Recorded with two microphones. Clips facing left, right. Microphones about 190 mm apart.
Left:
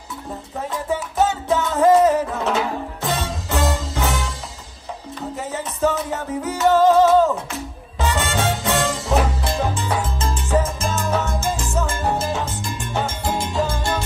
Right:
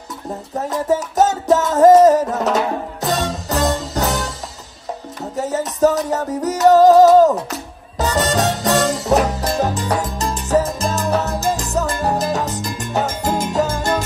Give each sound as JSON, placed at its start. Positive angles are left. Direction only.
{"t": 0.6, "sound": "music", "side_deg": -40}
{"t": 5.3, "sound": "music", "side_deg": -40}